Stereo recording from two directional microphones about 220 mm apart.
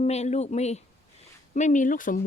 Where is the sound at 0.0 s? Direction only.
30° left (ahead or behind).